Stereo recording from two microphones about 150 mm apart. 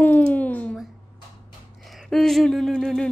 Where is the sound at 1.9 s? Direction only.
Centre (ahead or behind).